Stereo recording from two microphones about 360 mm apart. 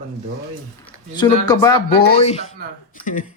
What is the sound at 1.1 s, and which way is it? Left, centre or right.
Speech, centre.